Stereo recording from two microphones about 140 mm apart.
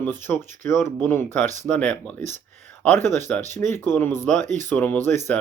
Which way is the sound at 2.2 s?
60° right (ahead or behind).